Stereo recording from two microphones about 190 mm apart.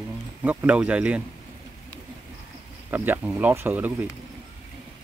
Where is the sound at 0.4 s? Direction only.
10° right (ahead or behind).